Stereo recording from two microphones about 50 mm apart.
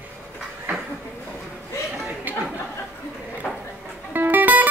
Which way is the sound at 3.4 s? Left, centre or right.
Centre.